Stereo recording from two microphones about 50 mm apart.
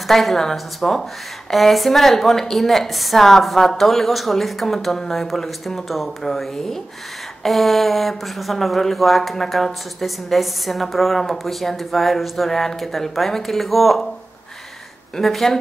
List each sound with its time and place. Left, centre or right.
0.1 s speech: centre
15.1 s speech: centre